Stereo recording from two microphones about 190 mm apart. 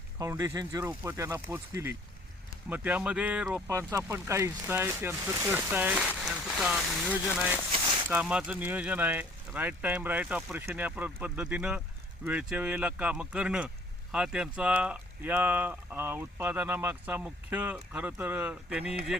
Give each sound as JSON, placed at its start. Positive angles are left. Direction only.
{"t": 0.2, "sound": "speech", "side_deg": -20}